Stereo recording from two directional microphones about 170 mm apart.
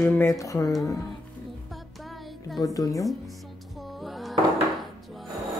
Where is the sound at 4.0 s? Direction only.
Centre (ahead or behind).